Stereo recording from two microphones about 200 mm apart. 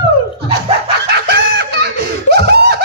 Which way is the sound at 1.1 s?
55° right (ahead or behind).